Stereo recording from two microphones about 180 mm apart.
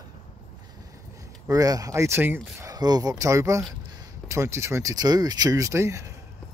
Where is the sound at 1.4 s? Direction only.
20° right (ahead or behind).